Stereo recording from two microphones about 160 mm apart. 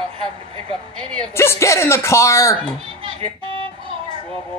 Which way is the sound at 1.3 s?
15° left (ahead or behind).